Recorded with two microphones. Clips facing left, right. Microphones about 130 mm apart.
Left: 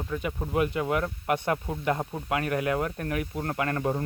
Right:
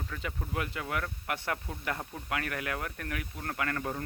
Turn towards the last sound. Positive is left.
turn(degrees=25)  # may be behind; listen again after turning